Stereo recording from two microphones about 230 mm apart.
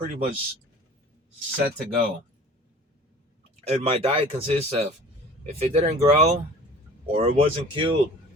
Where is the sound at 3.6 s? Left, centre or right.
Right.